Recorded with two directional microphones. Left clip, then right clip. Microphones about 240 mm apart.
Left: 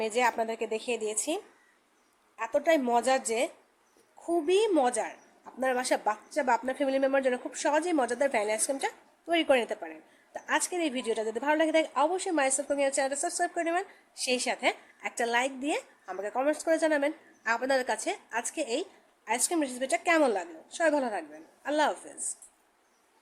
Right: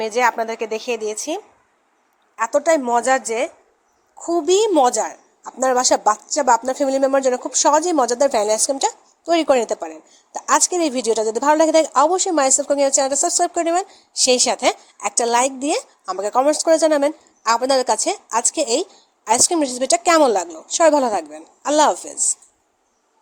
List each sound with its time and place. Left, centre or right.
0.0 s a woman's voice: centre; by 22.1 s right